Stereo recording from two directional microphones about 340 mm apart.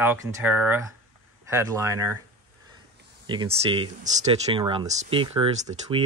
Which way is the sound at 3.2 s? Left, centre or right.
Centre.